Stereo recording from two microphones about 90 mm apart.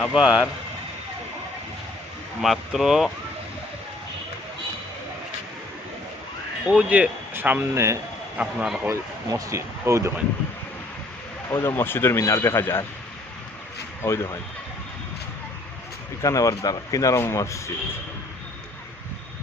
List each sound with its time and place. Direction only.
0.1 s speech: 10° right (ahead or behind)
2.4 s speech: centre (ahead or behind)
6.7 s speech: 15° right (ahead or behind); by 7.9 s 30° right (ahead or behind)
8.4 s speech: 5° right (ahead or behind)
8.9 s speech: 35° right (ahead or behind)
11.5 s speech: 25° left (ahead or behind)
14.0 s speech: 35° left (ahead or behind)
16.2 s speech: 40° left (ahead or behind)